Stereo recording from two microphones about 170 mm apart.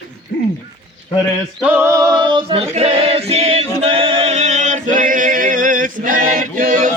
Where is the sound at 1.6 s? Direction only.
10° right (ahead or behind).